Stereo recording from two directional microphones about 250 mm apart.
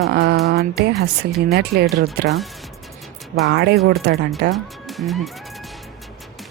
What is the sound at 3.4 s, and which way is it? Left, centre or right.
Speech, right.